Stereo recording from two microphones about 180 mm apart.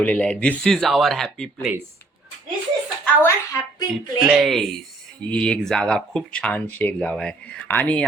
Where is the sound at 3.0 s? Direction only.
10° left (ahead or behind).